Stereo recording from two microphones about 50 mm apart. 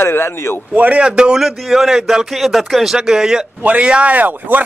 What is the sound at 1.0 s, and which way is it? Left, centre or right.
Speech, centre.